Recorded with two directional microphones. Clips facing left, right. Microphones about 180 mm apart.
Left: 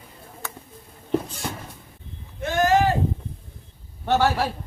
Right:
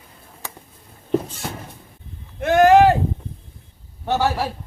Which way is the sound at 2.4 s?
60° right (ahead or behind).